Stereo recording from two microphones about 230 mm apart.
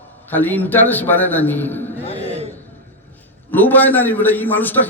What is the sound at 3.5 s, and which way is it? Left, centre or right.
A man's voice, centre.